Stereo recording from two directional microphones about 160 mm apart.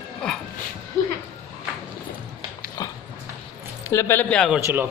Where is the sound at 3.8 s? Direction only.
15° left (ahead or behind).